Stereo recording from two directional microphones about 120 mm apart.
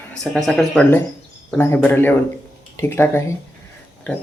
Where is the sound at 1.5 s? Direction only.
15° left (ahead or behind).